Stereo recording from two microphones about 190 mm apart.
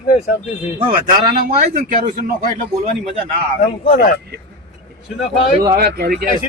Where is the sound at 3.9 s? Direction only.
45° left (ahead or behind).